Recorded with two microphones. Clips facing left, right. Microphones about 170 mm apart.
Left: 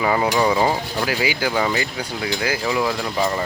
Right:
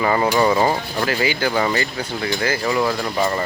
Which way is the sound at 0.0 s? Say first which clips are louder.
Right 1 dB; 5° left (ahead or behind).